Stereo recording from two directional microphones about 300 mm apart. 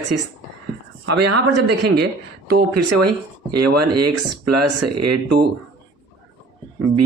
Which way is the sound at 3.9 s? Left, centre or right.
Right.